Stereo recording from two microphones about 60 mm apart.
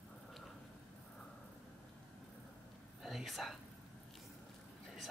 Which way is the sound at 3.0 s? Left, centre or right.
Centre.